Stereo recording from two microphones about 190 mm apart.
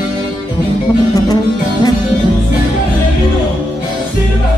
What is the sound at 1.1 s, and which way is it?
Music, 20° left (ahead or behind).